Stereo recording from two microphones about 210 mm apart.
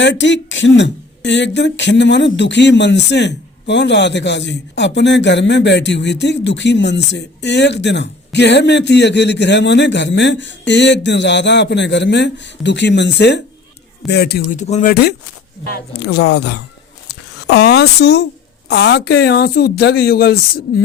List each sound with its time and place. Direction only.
0.0 s speech: 60° left (ahead or behind); by 14.9 s 35° left (ahead or behind)
15.6 s speech: 50° left (ahead or behind)
17.1 s a sound: 50° left (ahead or behind)
18.7 s speech: 50° left (ahead or behind)